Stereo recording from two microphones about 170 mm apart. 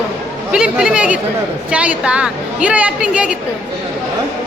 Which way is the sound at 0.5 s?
5° right (ahead or behind).